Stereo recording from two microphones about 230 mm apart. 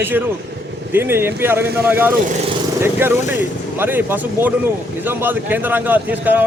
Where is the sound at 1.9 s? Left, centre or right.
Centre.